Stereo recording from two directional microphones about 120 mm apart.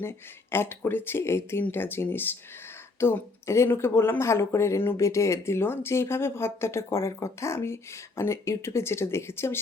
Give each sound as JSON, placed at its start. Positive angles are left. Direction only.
{"t": 0.0, "sound": "speech", "side_deg": 20}